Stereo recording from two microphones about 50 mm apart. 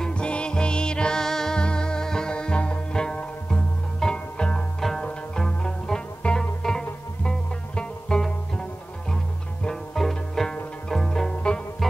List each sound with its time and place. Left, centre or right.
0.0 s music: centre
4.7 s music: centre
9.9 s music: centre
11.8 s music: centre